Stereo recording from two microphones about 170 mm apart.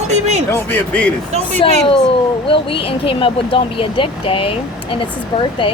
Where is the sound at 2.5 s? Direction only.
30° left (ahead or behind).